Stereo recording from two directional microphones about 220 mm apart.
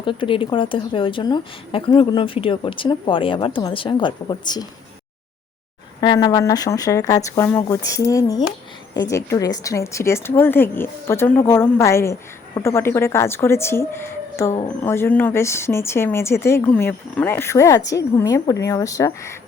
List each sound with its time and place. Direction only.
0.0 s a woman's voice: 25° left (ahead or behind)
6.0 s speech: 20° left (ahead or behind)